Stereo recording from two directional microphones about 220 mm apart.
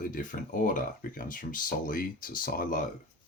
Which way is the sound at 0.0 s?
35° left (ahead or behind).